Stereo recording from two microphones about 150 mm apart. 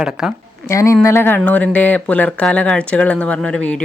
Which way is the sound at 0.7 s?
20° left (ahead or behind).